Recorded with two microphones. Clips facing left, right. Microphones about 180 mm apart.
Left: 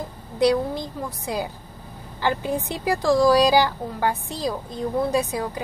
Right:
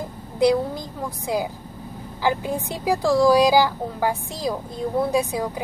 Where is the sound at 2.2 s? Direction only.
15° right (ahead or behind).